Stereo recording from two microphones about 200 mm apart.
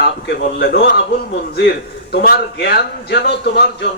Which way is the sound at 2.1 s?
55° left (ahead or behind).